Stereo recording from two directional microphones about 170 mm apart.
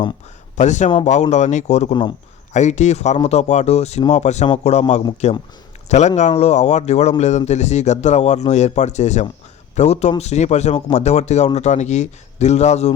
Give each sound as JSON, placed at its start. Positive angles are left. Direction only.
{"t": 0.5, "sound": "speech", "side_deg": 45}
{"t": 1.9, "sound": "a man's voice", "side_deg": 25}
{"t": 2.5, "sound": "speech", "side_deg": 45}